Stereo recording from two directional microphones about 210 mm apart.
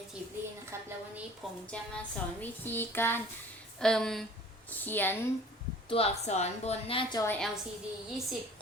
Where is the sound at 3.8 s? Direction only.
5° left (ahead or behind).